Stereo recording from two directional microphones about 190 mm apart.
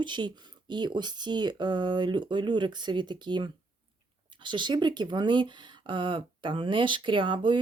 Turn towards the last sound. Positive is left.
turn(degrees=-25)  # may be behind; listen again after turning